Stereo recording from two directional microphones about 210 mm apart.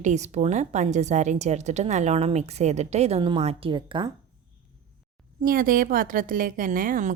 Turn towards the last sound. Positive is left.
turn(degrees=-40)  # may be behind; listen again after turning